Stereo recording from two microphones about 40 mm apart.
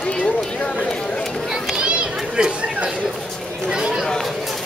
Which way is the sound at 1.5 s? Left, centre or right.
Centre.